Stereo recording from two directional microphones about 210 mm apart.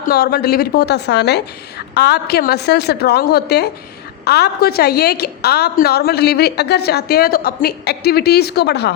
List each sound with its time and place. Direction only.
0.1 s a woman's voice: 45° left (ahead or behind)